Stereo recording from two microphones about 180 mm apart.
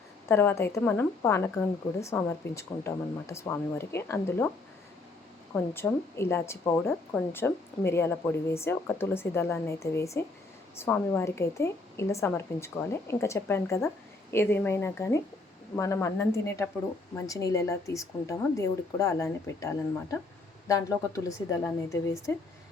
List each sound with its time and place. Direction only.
0.3 s speech: 15° left (ahead or behind)
5.7 s speech: 15° left (ahead or behind)